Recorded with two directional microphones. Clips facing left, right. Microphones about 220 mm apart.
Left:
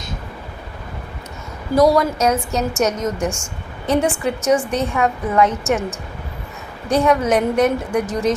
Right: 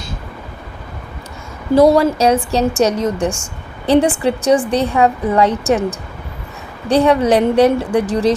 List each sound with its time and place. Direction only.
1.7 s a woman's voice: 30° right (ahead or behind)
6.8 s a woman's voice: 35° right (ahead or behind)